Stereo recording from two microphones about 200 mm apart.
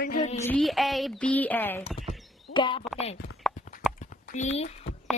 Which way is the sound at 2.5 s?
25° left (ahead or behind).